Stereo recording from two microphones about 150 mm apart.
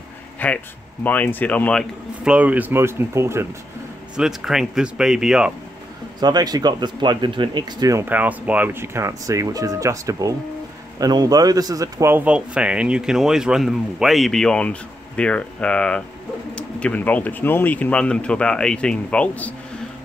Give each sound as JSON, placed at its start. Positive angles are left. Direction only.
{"t": 0.4, "sound": "speech", "side_deg": 10}
{"t": 2.2, "sound": "speech", "side_deg": -10}
{"t": 4.2, "sound": "speech", "side_deg": 0}
{"t": 6.1, "sound": "speech", "side_deg": -25}